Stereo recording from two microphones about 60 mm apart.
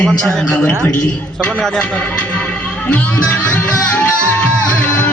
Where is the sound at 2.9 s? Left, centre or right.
Left.